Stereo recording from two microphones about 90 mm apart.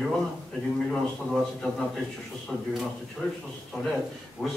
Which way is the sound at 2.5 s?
10° right (ahead or behind).